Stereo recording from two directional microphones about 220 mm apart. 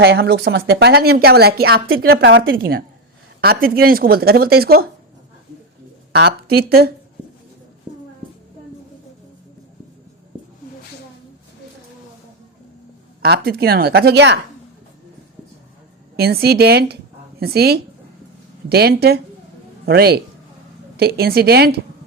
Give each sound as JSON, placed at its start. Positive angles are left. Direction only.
{"t": 0.0, "sound": "speech", "side_deg": -45}
{"t": 6.1, "sound": "speech", "side_deg": -45}
{"t": 7.9, "sound": "child singing", "side_deg": -20}
{"t": 13.2, "sound": "speech", "side_deg": -45}
{"t": 16.1, "sound": "speech", "side_deg": -45}